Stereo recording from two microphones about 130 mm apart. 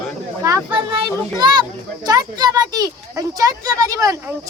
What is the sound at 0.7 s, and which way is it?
A child's voice, 35° right (ahead or behind).